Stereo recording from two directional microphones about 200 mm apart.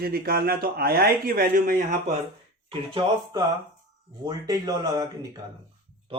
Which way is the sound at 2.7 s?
25° right (ahead or behind).